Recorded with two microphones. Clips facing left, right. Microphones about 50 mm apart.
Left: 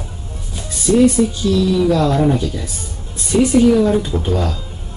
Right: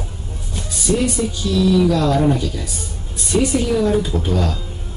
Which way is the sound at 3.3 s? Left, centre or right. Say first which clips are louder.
Left 3 dB; centre.